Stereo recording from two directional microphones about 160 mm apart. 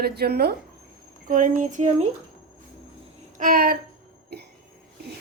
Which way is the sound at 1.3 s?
55° right (ahead or behind).